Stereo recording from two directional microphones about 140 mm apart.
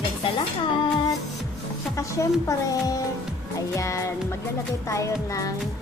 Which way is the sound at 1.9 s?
25° left (ahead or behind).